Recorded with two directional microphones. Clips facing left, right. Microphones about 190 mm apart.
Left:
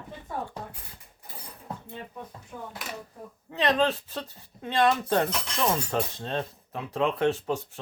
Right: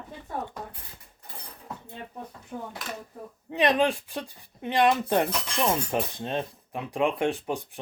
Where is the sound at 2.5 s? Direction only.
30° right (ahead or behind).